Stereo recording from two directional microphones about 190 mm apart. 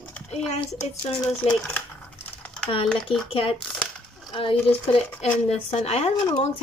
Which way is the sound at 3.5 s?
5° left (ahead or behind).